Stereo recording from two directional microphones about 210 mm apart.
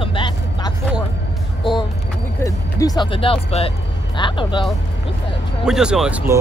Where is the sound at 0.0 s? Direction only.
25° left (ahead or behind).